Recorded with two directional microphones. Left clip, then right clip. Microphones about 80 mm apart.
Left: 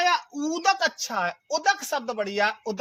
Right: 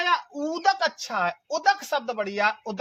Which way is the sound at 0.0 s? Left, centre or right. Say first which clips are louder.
Left 1 dB; centre.